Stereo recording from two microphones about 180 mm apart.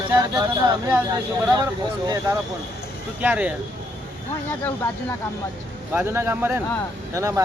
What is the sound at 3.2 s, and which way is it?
Speech, 10° right (ahead or behind).